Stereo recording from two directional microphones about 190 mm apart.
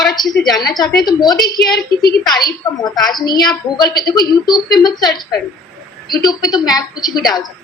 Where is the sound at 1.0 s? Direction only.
20° left (ahead or behind).